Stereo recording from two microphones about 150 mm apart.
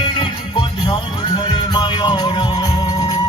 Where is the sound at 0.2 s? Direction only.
35° left (ahead or behind).